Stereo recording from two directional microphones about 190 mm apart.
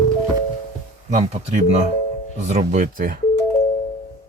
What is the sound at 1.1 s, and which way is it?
Speech, 35° right (ahead or behind).